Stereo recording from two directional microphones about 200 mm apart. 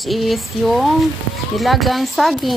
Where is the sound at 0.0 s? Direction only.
Centre (ahead or behind).